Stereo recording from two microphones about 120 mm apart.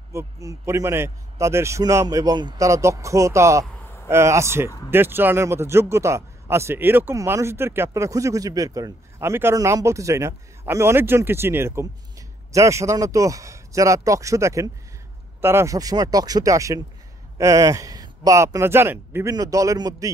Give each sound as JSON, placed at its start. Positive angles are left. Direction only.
{"t": 0.1, "sound": "a man's voice", "side_deg": -25}
{"t": 2.6, "sound": "a man's voice", "side_deg": -25}